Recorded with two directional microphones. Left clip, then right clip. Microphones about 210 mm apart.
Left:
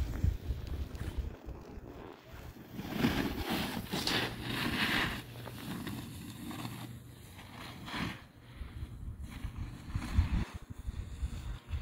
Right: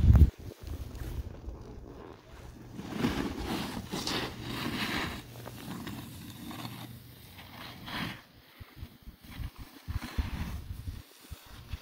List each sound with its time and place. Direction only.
2.8 s vehicle: 35° left (ahead or behind); by 5.2 s centre (ahead or behind)
5.6 s a sound: centre (ahead or behind)
7.5 s vehicle: 5° right (ahead or behind)
9.3 s boat: 5° right (ahead or behind)